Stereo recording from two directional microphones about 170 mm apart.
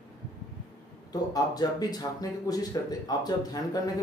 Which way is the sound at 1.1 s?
20° left (ahead or behind).